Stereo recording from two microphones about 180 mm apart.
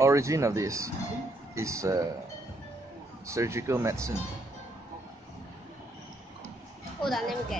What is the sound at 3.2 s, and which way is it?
Speech, 15° right (ahead or behind).